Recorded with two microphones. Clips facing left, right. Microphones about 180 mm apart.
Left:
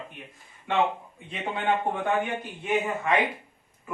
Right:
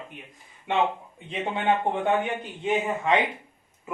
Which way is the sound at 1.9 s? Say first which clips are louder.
Right 2 dB; 20° right (ahead or behind).